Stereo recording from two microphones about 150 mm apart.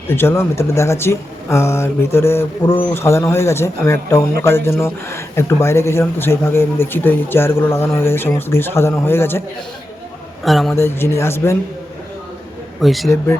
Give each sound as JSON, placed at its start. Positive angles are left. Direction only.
{"t": 0.1, "sound": "speech", "side_deg": 15}
{"t": 10.4, "sound": "a man's voice", "side_deg": 0}
{"t": 10.8, "sound": "speech", "side_deg": 15}
{"t": 12.8, "sound": "a man's voice", "side_deg": 0}
{"t": 13.1, "sound": "speech", "side_deg": 20}